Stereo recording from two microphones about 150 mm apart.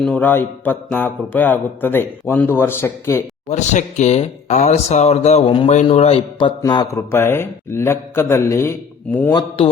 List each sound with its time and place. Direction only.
0.0 s speech: 10° left (ahead or behind)
3.5 s speech: 55° left (ahead or behind)
6.6 s mantra: 25° left (ahead or behind)
7.1 s speech: 15° left (ahead or behind)